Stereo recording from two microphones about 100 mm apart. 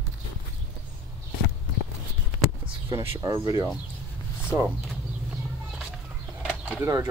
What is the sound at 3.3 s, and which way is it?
Speech, 40° right (ahead or behind).